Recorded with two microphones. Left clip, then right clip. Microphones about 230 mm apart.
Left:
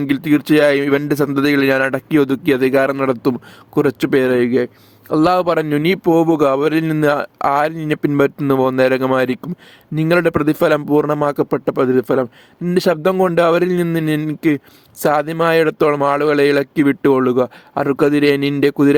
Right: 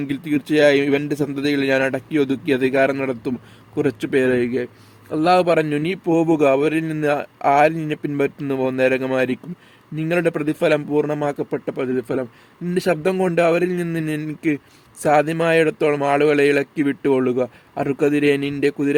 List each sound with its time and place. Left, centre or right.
0.0 s a man's voice: left